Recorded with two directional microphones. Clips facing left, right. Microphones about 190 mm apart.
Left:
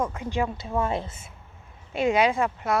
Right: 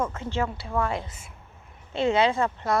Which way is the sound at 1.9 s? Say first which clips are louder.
Even; 10° left (ahead or behind).